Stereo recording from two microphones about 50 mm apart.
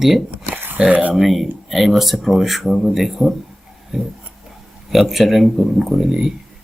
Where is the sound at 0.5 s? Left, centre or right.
Right.